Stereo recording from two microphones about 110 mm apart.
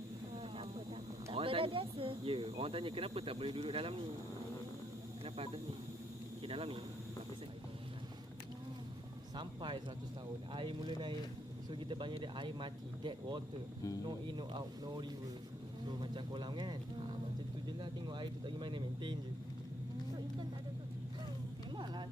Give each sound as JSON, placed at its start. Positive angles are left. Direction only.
{"t": 0.3, "sound": "a sound", "side_deg": -60}
{"t": 1.3, "sound": "speech", "side_deg": -55}
{"t": 6.4, "sound": "a man's voice", "side_deg": -55}
{"t": 9.3, "sound": "speech", "side_deg": -45}